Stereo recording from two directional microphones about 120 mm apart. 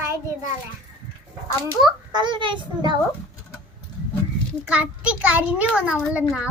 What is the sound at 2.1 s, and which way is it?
Speech, 40° right (ahead or behind).